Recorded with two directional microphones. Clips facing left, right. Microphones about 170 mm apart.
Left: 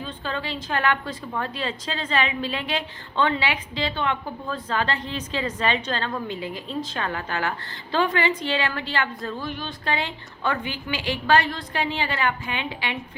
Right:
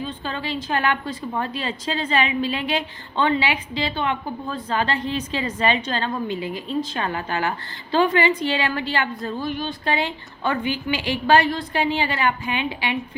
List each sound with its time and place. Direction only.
0.0 s a woman's voice: 5° right (ahead or behind)